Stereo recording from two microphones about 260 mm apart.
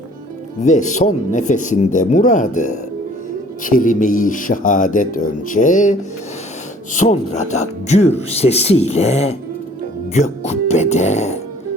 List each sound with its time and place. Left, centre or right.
0.6 s speech: left